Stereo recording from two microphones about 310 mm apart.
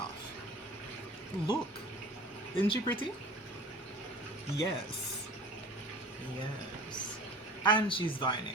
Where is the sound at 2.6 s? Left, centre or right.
Centre.